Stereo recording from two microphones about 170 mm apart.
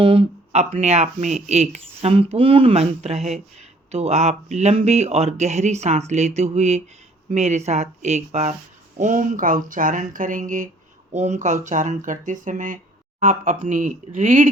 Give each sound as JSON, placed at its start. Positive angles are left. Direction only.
{"t": 0.0, "sound": "speech", "side_deg": -30}